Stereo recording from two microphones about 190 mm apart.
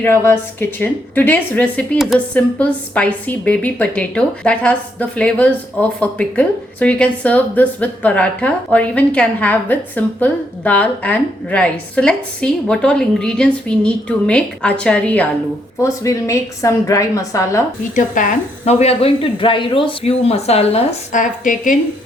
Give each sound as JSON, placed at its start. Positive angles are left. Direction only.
{"t": 0.0, "sound": "speech", "side_deg": 10}
{"t": 17.9, "sound": "a woman's voice", "side_deg": 45}